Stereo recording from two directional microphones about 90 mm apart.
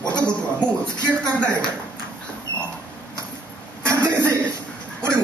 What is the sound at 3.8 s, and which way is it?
Chuckle, 35° right (ahead or behind).